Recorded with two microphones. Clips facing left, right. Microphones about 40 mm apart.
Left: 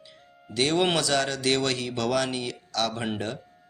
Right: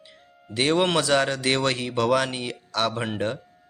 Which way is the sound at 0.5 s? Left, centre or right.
Right.